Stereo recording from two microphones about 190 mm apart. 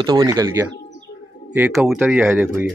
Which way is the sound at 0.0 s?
20° right (ahead or behind).